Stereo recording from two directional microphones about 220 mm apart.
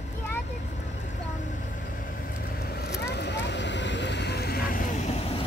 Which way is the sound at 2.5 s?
45° left (ahead or behind).